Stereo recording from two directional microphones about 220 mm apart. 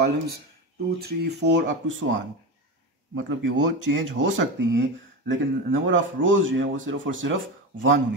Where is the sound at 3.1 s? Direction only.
55° right (ahead or behind).